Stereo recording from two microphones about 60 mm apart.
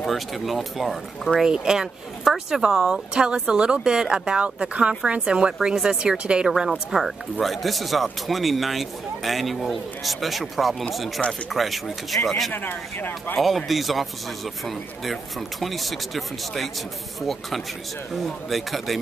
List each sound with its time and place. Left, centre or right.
0.0 s speech: centre
1.4 s speech: centre
12.5 s speech: left
13.4 s speech: centre
15.6 s speech: centre
18.1 s speech: centre